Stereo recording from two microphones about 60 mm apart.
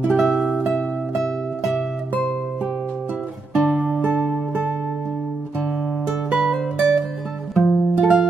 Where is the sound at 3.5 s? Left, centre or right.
Centre.